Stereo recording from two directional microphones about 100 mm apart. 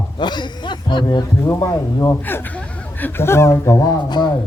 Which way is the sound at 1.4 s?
30° left (ahead or behind).